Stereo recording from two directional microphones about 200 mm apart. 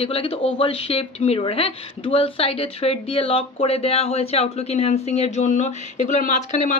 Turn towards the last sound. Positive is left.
turn(degrees=35)  # may be behind; listen again after turning